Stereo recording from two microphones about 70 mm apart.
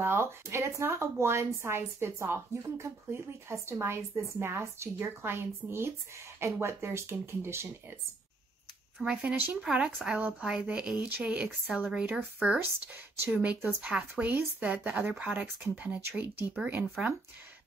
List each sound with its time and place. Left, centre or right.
0.0 s speech: right
9.0 s speech: centre